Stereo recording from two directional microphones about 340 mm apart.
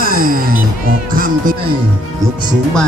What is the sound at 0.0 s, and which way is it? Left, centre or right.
Music, right.